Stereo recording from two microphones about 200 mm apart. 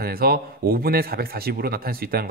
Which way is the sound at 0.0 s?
50° right (ahead or behind).